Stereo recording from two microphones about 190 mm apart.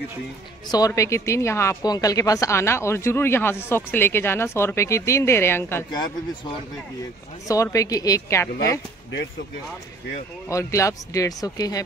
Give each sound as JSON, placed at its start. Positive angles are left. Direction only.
{"t": 0.7, "sound": "speech", "side_deg": 20}
{"t": 10.5, "sound": "speech", "side_deg": 15}